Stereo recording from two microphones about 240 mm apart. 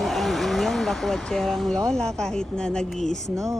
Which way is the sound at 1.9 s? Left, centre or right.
Centre.